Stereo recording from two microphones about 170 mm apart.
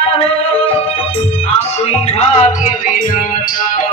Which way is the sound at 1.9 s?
35° left (ahead or behind).